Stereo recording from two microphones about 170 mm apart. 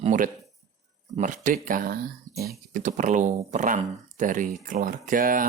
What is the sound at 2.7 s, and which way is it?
Speech, 45° right (ahead or behind).